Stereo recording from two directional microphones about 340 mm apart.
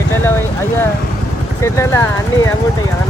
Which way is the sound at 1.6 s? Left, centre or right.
Centre.